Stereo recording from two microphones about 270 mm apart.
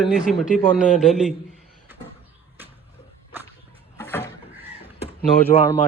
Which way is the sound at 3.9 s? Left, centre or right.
Centre.